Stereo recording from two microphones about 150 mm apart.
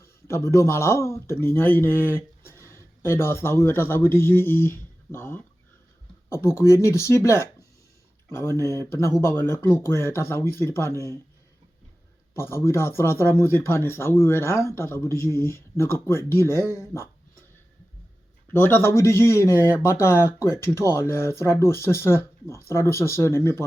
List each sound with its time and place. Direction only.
0.0 s speech: 20° left (ahead or behind)
2.4 s a sound: 15° left (ahead or behind)
3.6 s speech: 15° left (ahead or behind)
12.3 s speech: 15° left (ahead or behind)
18.5 s speech: 15° left (ahead or behind)